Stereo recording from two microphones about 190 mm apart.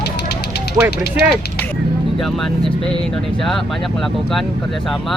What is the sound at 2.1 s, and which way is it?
Speech, centre (ahead or behind).